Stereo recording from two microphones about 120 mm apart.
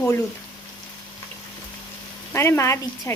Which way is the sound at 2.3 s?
20° left (ahead or behind).